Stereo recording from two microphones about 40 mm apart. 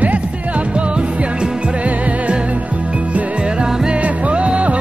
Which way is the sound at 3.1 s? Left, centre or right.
Right.